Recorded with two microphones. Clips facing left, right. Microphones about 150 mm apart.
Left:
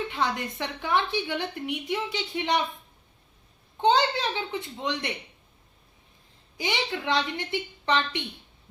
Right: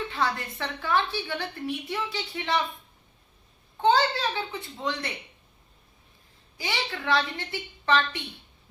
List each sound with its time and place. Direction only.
0.1 s a woman's voice: 15° left (ahead or behind)
3.8 s a woman's voice: 20° left (ahead or behind)
6.6 s a woman's voice: 20° left (ahead or behind)